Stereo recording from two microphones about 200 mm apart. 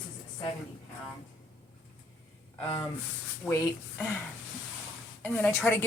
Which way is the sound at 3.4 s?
15° left (ahead or behind).